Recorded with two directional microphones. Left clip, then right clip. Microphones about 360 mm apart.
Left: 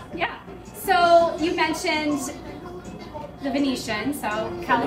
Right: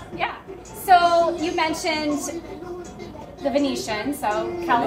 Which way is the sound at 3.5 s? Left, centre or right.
Centre.